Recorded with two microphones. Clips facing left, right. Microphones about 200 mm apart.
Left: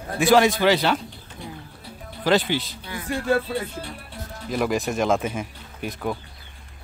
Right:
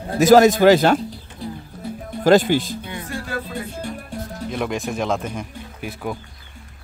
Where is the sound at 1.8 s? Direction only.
45° right (ahead or behind).